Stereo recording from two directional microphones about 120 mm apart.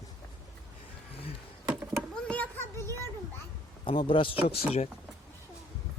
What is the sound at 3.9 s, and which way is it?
Speech, 45° left (ahead or behind).